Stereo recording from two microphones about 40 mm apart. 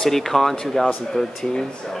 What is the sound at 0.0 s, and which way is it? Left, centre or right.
A man's voice, centre.